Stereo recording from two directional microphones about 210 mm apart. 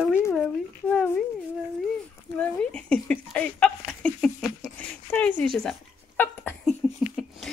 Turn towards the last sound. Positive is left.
turn(degrees=0)  # may be behind; listen again after turning